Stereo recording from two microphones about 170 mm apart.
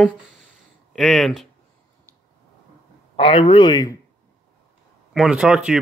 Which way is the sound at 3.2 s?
30° left (ahead or behind).